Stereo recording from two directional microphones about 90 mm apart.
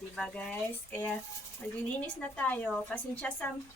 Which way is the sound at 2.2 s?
15° left (ahead or behind).